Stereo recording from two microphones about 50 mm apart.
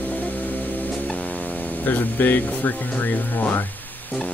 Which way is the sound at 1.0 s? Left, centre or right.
Centre.